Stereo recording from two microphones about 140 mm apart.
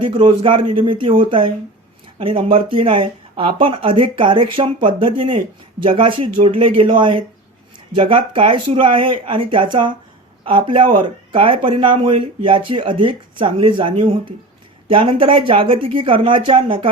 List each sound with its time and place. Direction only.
0.0 s speech: 35° right (ahead or behind)